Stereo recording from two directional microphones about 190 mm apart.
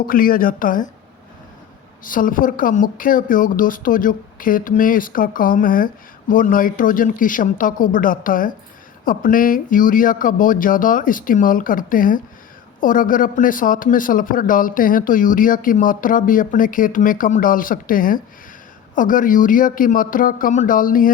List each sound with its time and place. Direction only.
0.0 s a woman's voice: 50° left (ahead or behind)
2.0 s a woman's voice: 45° left (ahead or behind)